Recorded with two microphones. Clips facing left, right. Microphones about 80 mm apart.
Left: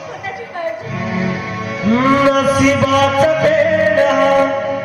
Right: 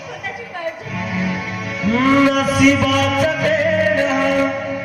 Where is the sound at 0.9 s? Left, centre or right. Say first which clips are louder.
Left 3 dB; left.